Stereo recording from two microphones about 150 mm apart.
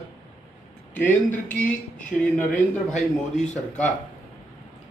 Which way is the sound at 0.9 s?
10° left (ahead or behind).